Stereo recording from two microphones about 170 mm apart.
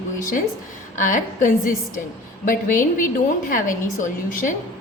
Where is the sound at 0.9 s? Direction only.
50° left (ahead or behind).